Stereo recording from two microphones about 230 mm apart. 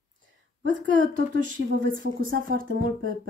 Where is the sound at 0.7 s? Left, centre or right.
Right.